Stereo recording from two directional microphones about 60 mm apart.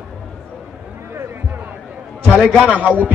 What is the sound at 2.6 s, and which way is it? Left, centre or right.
Speech, right.